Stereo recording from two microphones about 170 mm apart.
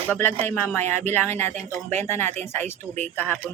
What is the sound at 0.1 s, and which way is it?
Speech, 15° left (ahead or behind).